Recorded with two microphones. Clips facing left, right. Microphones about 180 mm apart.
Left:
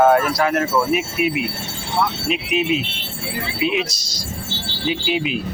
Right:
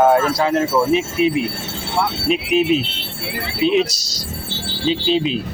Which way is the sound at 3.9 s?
70° right (ahead or behind).